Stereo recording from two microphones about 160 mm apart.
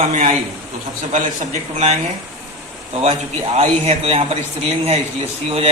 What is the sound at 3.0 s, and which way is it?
A man's voice, 40° right (ahead or behind).